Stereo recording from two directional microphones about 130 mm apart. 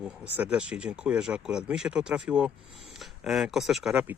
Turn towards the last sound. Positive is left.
turn(degrees=0)  # may be behind; listen again after turning